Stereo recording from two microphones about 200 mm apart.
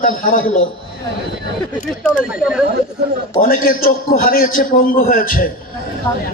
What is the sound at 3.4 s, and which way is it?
A man's voice, 45° left (ahead or behind).